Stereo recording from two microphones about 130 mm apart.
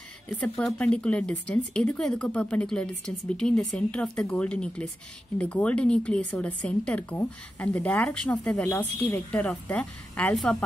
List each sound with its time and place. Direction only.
0.3 s a woman's voice: 5° left (ahead or behind)